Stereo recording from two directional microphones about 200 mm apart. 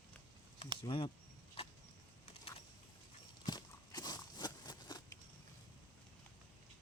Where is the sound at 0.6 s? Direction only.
30° left (ahead or behind).